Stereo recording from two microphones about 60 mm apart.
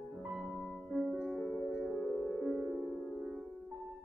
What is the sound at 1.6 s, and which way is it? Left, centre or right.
Music, centre.